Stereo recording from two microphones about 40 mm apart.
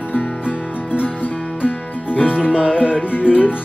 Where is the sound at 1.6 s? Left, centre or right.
Left.